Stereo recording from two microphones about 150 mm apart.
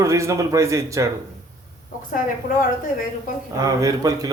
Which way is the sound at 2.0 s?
65° left (ahead or behind).